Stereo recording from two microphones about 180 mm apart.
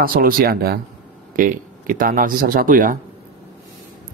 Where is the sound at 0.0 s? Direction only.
55° right (ahead or behind).